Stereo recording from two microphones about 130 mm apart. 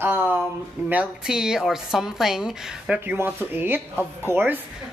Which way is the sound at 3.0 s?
15° right (ahead or behind).